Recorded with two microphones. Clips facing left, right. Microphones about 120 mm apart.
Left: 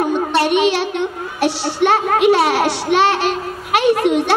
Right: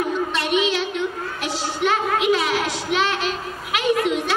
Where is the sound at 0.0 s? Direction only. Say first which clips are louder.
Left 7 dB; 65° left (ahead or behind).